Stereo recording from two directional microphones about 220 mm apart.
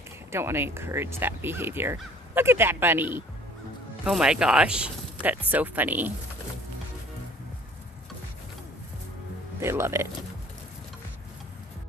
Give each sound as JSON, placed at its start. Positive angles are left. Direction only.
{"t": 0.3, "sound": "speech", "side_deg": -10}
{"t": 9.6, "sound": "speech", "side_deg": -10}